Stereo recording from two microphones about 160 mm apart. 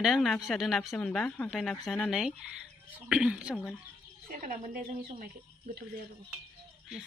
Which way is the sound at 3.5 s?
5° left (ahead or behind).